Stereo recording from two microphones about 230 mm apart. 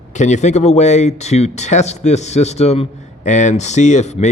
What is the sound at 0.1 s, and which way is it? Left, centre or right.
Speech, left.